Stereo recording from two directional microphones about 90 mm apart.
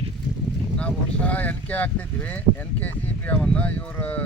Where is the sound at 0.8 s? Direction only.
15° left (ahead or behind).